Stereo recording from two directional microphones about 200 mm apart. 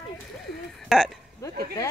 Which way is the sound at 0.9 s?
Centre (ahead or behind).